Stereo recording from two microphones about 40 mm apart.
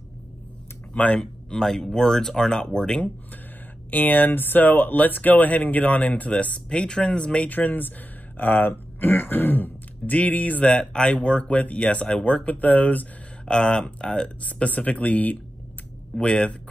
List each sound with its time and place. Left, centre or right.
0.9 s speech: left
1.2 s speech: centre
3.9 s speech: left
7.4 s speech: left
10.6 s speech: left
11.3 s speech: left
12.4 s speech: left
13.5 s speech: centre
14.2 s speech: left
16.2 s speech: left